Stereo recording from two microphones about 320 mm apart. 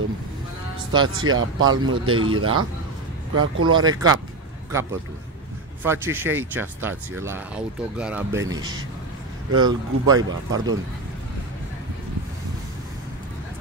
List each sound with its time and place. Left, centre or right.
1.0 s speech: right
3.7 s speech: centre
5.9 s speech: centre
10.1 s speech: right